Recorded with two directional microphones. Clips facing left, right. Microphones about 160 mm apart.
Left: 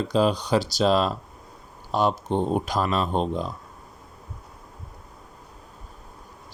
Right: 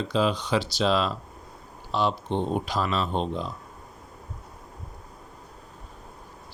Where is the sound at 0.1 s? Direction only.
40° left (ahead or behind).